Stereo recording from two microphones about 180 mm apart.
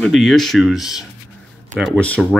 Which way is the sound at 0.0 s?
Centre (ahead or behind).